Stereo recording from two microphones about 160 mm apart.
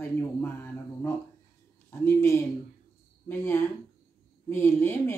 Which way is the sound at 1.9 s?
15° left (ahead or behind).